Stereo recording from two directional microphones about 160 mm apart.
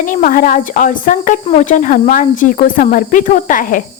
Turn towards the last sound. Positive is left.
turn(degrees=55)  # may be behind; listen again after turning